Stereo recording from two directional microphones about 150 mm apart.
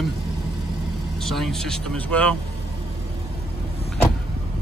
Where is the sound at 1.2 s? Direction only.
Centre (ahead or behind).